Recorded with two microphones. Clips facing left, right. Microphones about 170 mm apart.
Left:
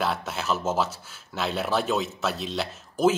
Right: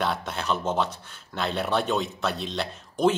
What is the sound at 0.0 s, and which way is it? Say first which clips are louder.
Speech: even; 5° left (ahead or behind).